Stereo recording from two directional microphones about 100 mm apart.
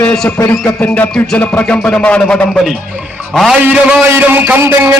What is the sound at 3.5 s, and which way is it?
A man's voice, 10° right (ahead or behind).